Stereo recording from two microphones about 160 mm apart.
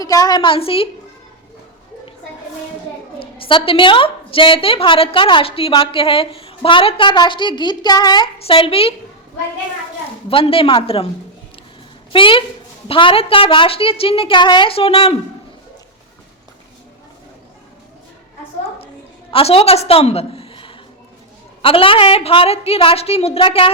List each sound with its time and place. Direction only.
0.0 s a woman's voice: 20° left (ahead or behind)
3.2 s a woman's voice: 35° left (ahead or behind)
10.2 s a woman's voice: 35° left (ahead or behind)
12.1 s a woman's voice: 30° left (ahead or behind)
19.3 s a woman's voice: 35° left (ahead or behind)